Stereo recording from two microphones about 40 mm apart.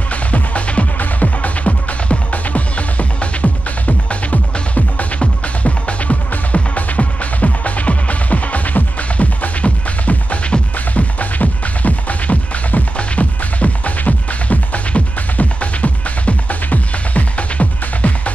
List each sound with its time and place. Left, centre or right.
0.1 s music: left